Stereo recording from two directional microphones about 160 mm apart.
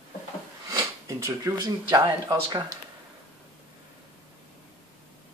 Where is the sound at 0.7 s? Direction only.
20° right (ahead or behind).